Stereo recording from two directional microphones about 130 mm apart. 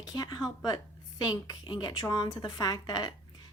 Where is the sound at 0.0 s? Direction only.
30° left (ahead or behind).